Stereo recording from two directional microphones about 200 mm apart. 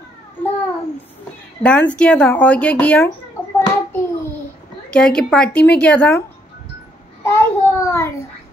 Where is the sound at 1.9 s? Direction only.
5° left (ahead or behind).